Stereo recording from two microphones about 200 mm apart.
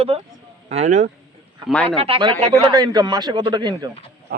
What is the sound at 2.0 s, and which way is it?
A man's voice, 25° right (ahead or behind).